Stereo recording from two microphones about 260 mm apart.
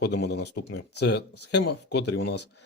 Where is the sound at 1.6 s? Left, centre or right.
Left.